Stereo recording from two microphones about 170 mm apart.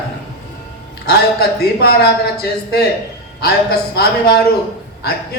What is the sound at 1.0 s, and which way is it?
Speech, 65° left (ahead or behind).